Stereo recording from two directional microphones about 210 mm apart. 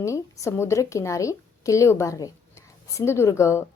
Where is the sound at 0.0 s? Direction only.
15° left (ahead or behind).